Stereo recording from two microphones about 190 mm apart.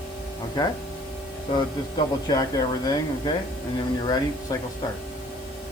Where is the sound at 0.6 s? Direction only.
20° left (ahead or behind).